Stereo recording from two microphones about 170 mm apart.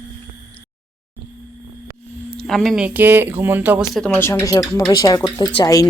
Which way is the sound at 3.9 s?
10° left (ahead or behind).